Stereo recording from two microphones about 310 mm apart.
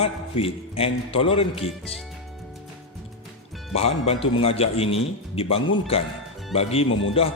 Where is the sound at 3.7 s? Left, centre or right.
Centre.